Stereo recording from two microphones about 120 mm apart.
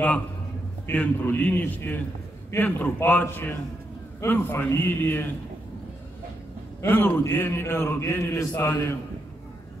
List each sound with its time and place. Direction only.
0.8 s a man's voice: 15° left (ahead or behind)
6.8 s a man's voice: 20° left (ahead or behind)